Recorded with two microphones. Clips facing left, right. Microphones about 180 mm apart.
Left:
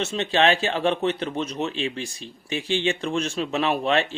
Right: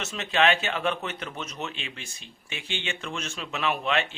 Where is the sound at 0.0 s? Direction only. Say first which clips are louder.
Left 4 dB; 30° left (ahead or behind).